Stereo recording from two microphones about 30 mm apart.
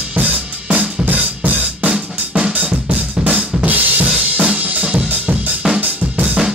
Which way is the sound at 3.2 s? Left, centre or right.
Right.